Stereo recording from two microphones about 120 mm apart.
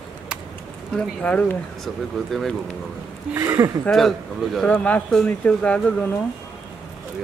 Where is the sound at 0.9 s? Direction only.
10° left (ahead or behind).